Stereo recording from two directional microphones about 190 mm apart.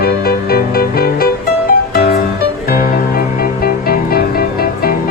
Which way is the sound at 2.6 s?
50° left (ahead or behind).